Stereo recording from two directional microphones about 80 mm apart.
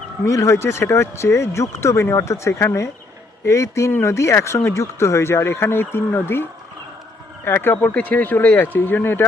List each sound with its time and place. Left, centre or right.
0.3 s speech: left